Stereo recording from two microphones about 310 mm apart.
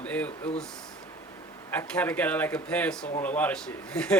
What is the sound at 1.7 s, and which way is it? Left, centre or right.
A man's voice, centre.